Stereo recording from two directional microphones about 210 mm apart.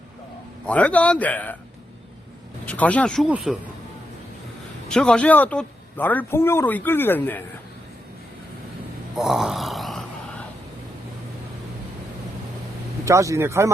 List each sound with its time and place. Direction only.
0.6 s a man's voice: 5° left (ahead or behind)
2.6 s speech: 5° left (ahead or behind)
4.9 s a man's voice: 5° left (ahead or behind)
9.1 s a sound: centre (ahead or behind)
13.1 s speech: 15° right (ahead or behind)